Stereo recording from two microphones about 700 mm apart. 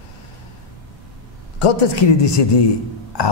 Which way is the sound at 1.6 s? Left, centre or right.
Left.